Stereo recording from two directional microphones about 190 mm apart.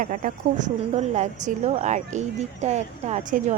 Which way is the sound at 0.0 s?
45° right (ahead or behind).